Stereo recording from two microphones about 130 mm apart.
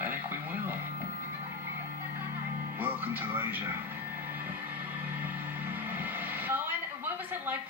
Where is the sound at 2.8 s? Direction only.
15° right (ahead or behind).